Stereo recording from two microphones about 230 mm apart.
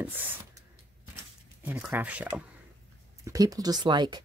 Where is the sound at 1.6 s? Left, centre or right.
Centre.